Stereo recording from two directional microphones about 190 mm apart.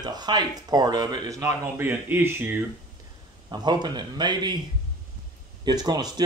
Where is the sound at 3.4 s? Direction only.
20° right (ahead or behind).